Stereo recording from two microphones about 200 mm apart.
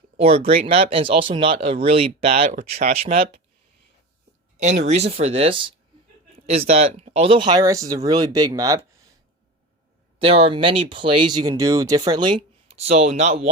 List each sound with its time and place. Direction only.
0.2 s speech: 30° right (ahead or behind)
4.5 s speech: 35° right (ahead or behind); by 8.8 s 15° right (ahead or behind)
10.2 s speech: 30° right (ahead or behind)
12.7 s speech: 30° right (ahead or behind)